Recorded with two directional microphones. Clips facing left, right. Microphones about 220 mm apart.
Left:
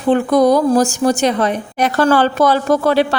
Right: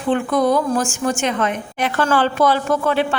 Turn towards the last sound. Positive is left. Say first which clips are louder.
# left 5 dB
turn(degrees=35)  # may be behind; listen again after turning